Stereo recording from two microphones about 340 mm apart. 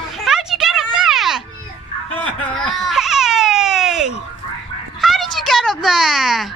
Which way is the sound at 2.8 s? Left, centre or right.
Centre.